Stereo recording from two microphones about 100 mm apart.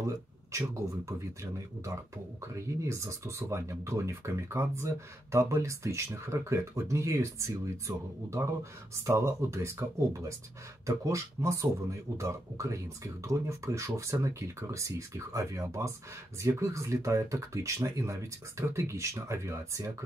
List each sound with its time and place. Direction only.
0.0 s speech: 30° right (ahead or behind)